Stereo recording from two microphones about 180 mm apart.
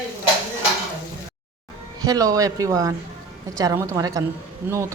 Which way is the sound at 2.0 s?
20° right (ahead or behind).